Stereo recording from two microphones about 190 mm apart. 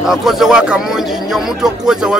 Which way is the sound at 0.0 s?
Centre (ahead or behind).